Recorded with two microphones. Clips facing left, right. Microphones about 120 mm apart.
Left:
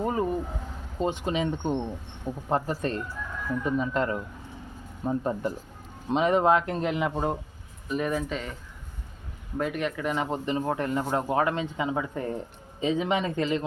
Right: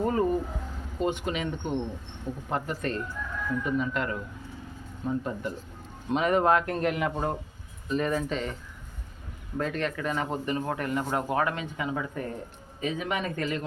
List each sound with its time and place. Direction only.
0.0 s vehicle: 15° left (ahead or behind)
0.9 s a man's voice: 30° left (ahead or behind)
6.1 s a man's voice: 25° left (ahead or behind); by 8.5 s 5° left (ahead or behind)
9.6 s a man's voice: 15° left (ahead or behind)